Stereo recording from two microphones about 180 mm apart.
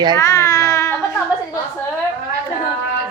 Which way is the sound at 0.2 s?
15° left (ahead or behind).